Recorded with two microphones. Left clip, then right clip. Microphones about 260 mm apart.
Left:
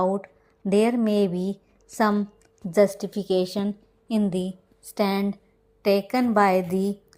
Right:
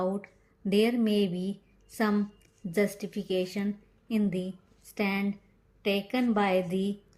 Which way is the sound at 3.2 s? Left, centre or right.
Left.